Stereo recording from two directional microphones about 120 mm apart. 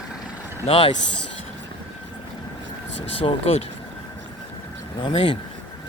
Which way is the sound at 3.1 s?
55° left (ahead or behind).